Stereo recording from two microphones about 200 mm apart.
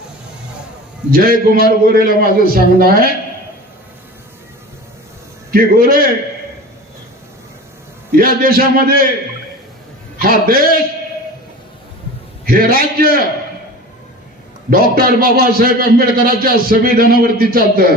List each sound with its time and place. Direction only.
1.1 s a man's voice: 45° right (ahead or behind)
5.5 s a man's voice: 45° right (ahead or behind)
8.2 s a man's voice: 45° right (ahead or behind)
10.2 s a man's voice: 45° right (ahead or behind)
12.5 s a man's voice: 45° right (ahead or behind)
14.7 s a man's voice: 50° right (ahead or behind)